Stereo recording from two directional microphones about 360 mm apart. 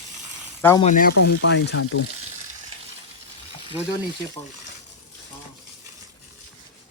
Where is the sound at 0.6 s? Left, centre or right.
Centre.